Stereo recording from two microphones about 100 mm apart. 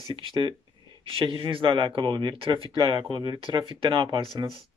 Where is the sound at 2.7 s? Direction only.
50° right (ahead or behind).